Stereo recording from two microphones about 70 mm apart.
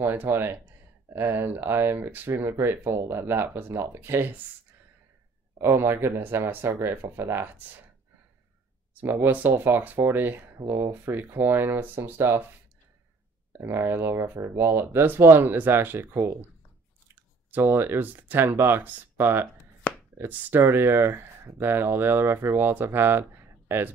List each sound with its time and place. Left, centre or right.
0.0 s speech: right
5.6 s speech: right
9.0 s speech: right
13.6 s speech: right
19.9 s chopping: centre
20.2 s speech: right
22.9 s a sound: right